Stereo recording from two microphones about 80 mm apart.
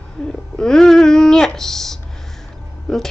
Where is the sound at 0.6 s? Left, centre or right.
Centre.